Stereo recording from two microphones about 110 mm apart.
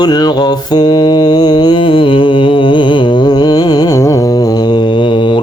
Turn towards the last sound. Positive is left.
turn(degrees=45)  # may be behind; listen again after turning